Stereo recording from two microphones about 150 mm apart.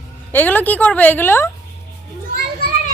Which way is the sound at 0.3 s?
10° left (ahead or behind).